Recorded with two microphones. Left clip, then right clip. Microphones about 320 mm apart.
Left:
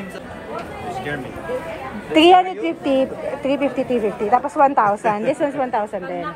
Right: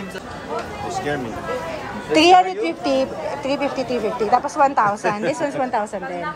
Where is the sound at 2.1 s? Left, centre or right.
Centre.